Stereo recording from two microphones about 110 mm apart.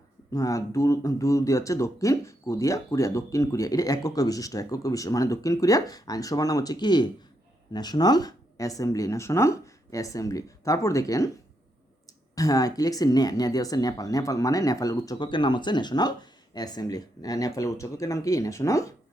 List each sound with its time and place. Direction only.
0.3 s speech: 30° left (ahead or behind)
12.3 s speech: 35° left (ahead or behind)